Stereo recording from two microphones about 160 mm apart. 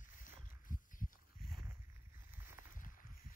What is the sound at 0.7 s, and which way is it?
Heart sounds, 55° left (ahead or behind).